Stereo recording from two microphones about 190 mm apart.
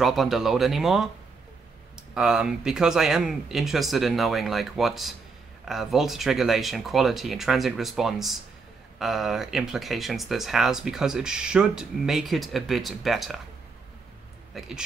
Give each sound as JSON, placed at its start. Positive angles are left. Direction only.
{"t": 0.0, "sound": "speech", "side_deg": 0}
{"t": 14.5, "sound": "speech", "side_deg": -5}